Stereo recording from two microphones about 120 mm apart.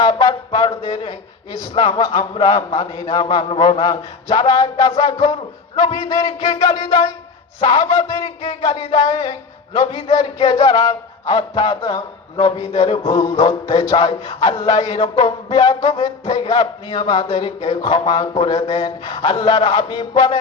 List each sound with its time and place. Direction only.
0.0 s music: 35° left (ahead or behind)
1.5 s a man's voice: 40° left (ahead or behind)